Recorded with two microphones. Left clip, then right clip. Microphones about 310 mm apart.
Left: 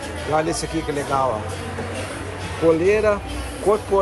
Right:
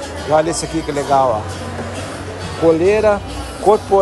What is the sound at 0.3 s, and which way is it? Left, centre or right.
Speech, centre.